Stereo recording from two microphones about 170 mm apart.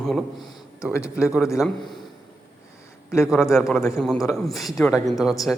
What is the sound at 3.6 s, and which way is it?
A woman's voice, centre (ahead or behind).